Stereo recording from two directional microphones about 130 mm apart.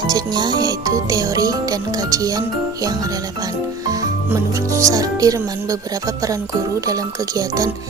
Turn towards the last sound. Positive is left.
turn(degrees=-25)  # may be behind; listen again after turning